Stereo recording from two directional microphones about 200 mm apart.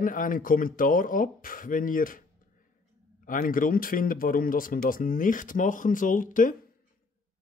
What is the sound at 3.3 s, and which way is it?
Speech, 45° left (ahead or behind).